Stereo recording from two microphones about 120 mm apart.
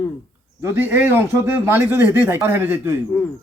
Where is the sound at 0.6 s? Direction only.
20° right (ahead or behind).